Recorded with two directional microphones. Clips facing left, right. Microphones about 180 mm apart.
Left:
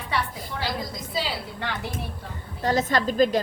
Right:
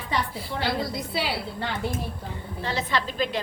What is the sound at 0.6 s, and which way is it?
Speech, 65° right (ahead or behind).